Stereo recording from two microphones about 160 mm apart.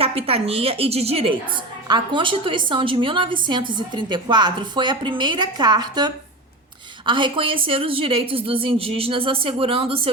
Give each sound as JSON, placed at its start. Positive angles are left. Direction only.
{"t": 0.0, "sound": "a woman's voice", "side_deg": -35}